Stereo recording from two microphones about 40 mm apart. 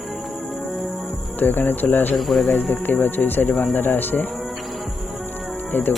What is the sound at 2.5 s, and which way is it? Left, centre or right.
Speech, left.